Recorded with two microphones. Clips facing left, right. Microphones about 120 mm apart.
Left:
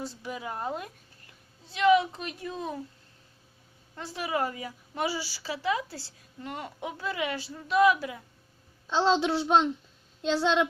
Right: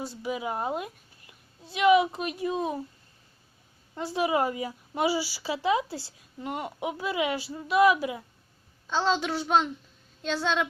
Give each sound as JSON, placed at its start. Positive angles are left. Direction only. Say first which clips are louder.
{"t": 0.0, "sound": "a woman's voice", "louder": "right 4 dB", "side_deg": -10}
{"t": 3.9, "sound": "a woman's voice", "louder": "right 5 dB", "side_deg": -20}
{"t": 9.0, "sound": "a child's voice", "louder": "left 3 dB", "side_deg": 25}